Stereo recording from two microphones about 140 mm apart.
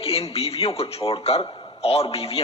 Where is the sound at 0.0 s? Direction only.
40° left (ahead or behind).